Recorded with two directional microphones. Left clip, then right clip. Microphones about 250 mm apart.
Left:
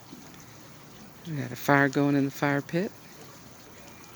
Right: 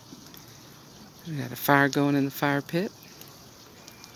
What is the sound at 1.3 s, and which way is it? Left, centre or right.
Speech, centre.